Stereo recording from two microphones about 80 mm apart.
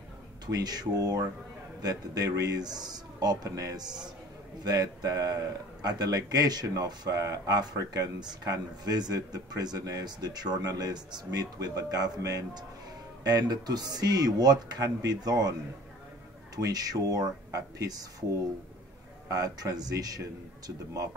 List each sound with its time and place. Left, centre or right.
0.5 s a man's voice: right
3.4 s a man's voice: right
16.5 s a man's voice: right
19.2 s a man's voice: right